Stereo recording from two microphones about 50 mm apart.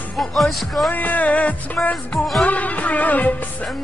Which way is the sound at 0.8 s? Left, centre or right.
Left.